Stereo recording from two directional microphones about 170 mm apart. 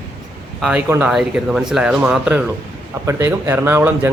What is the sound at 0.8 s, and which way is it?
Speech, 15° right (ahead or behind).